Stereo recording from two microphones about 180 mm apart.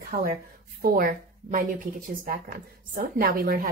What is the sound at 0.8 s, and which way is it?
Speech, 55° right (ahead or behind).